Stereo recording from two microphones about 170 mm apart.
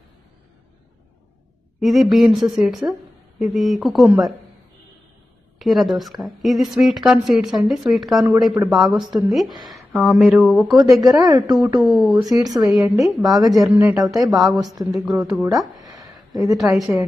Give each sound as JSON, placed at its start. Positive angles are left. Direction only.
{"t": 1.8, "sound": "a woman's voice", "side_deg": 0}
{"t": 5.6, "sound": "a woman's voice", "side_deg": 0}
{"t": 11.0, "sound": "a woman's voice", "side_deg": -20}
{"t": 11.8, "sound": "a woman's voice", "side_deg": -5}
{"t": 12.2, "sound": "a woman's voice", "side_deg": -20}
{"t": 12.6, "sound": "a woman's voice", "side_deg": -5}
{"t": 13.2, "sound": "a woman's voice", "side_deg": -20}
{"t": 13.9, "sound": "a woman's voice", "side_deg": 0}
{"t": 14.7, "sound": "a woman's voice", "side_deg": -20}
{"t": 15.1, "sound": "a woman's voice", "side_deg": 0}
{"t": 15.8, "sound": "a sound", "side_deg": -20}
{"t": 16.5, "sound": "a woman's voice", "side_deg": 0}